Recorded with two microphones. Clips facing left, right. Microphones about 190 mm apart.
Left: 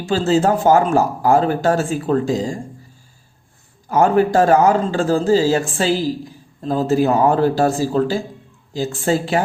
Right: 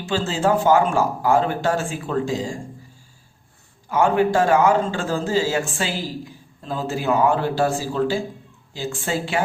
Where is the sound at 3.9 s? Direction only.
40° left (ahead or behind).